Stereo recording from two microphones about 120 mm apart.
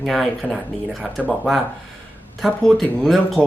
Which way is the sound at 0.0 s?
Centre (ahead or behind).